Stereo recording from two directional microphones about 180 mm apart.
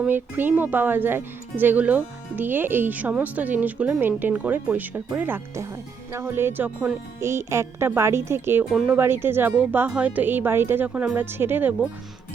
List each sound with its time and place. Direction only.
0.0 s speech: 10° right (ahead or behind)